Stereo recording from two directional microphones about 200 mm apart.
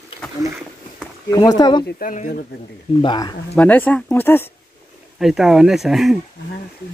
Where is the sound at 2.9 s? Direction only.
20° left (ahead or behind).